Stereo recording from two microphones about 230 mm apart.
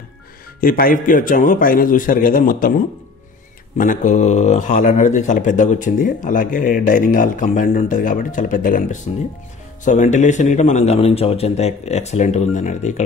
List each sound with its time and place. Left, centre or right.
0.6 s speech: left
3.7 s a man's voice: left